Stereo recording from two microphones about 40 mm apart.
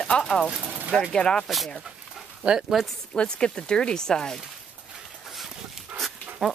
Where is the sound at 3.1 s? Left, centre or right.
Left.